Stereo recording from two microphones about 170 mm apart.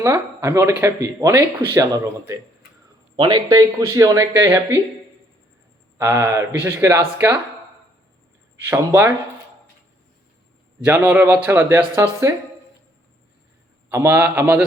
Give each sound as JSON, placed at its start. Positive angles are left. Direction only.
{"t": 0.0, "sound": "speech", "side_deg": -15}
{"t": 6.0, "sound": "speech", "side_deg": -15}
{"t": 8.6, "sound": "speech", "side_deg": -15}
{"t": 10.8, "sound": "speech", "side_deg": -10}
{"t": 13.9, "sound": "speech", "side_deg": -15}